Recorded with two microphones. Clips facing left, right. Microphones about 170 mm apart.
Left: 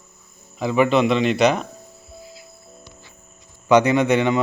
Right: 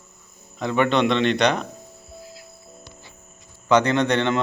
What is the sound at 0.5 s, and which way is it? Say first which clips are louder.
A man's voice: left 3 dB; 5° left (ahead or behind).